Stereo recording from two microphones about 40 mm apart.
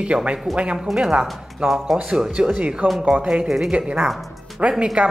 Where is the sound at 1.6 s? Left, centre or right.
Right.